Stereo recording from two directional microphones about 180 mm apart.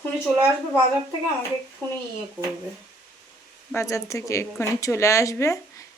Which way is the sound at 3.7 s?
15° left (ahead or behind).